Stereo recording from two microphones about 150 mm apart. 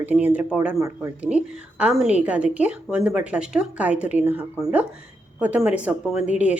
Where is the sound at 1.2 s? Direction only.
10° right (ahead or behind).